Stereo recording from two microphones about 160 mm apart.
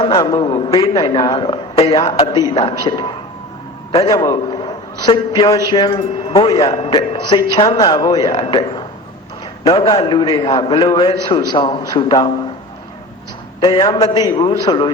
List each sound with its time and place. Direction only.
0.0 s a man's voice: 30° left (ahead or behind)
0.8 s a man's voice: 25° left (ahead or behind)
13.6 s a man's voice: 30° left (ahead or behind)